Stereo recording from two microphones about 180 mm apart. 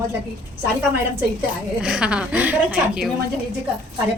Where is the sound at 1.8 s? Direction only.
5° right (ahead or behind).